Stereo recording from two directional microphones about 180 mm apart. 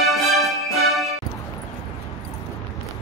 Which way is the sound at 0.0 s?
Centre (ahead or behind).